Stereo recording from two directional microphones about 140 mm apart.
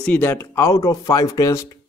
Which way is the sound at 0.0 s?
10° left (ahead or behind).